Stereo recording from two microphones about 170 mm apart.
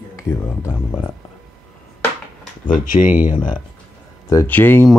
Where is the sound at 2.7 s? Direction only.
50° left (ahead or behind).